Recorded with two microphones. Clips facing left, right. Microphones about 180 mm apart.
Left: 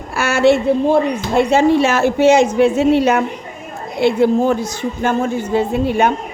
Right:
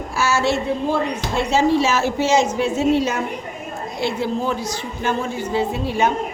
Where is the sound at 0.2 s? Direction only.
60° left (ahead or behind).